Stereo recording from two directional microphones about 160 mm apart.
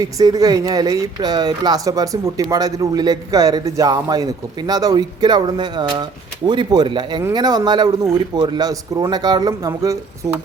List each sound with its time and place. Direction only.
0.0 s speech: 20° right (ahead or behind)